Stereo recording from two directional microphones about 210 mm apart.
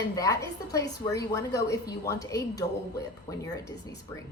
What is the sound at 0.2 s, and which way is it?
A woman's voice, 15° left (ahead or behind).